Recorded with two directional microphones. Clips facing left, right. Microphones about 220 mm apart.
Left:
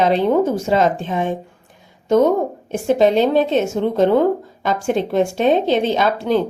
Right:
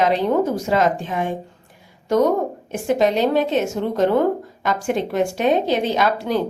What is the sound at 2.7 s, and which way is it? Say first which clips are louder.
Speech: left 4 dB; 25° left (ahead or behind).